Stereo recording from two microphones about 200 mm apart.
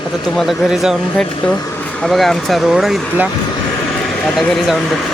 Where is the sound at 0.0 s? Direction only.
25° left (ahead or behind).